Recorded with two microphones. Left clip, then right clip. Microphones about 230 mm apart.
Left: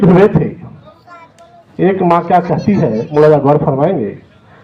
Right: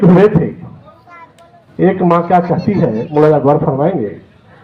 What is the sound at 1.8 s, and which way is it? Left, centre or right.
Speech, left.